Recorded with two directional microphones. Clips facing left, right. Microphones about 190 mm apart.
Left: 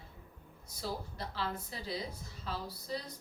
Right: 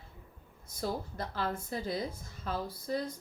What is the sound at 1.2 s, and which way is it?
A woman's voice, 50° right (ahead or behind).